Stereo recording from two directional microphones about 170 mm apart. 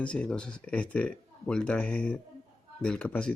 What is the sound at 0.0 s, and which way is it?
Speech, 5° left (ahead or behind).